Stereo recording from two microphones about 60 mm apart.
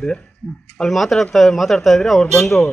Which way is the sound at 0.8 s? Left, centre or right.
Centre.